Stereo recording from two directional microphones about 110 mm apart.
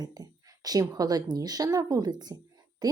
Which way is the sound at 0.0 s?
35° right (ahead or behind).